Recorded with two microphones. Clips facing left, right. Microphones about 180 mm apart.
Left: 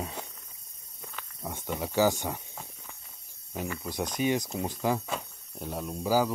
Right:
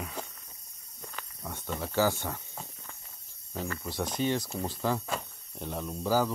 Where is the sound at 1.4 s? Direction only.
15° left (ahead or behind).